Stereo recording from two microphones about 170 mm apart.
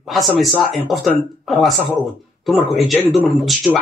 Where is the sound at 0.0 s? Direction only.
Centre (ahead or behind).